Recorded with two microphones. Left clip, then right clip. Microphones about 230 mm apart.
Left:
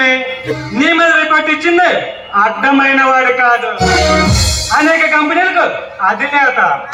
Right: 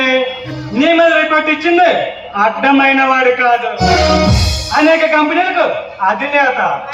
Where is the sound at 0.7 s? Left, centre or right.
Centre.